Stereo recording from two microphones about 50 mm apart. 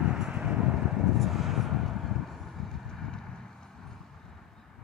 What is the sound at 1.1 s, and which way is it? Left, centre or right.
Vehicle, centre.